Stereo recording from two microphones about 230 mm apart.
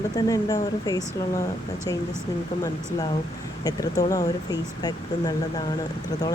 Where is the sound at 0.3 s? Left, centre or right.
Centre.